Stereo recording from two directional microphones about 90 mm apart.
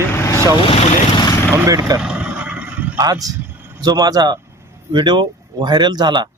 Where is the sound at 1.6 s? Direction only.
40° right (ahead or behind).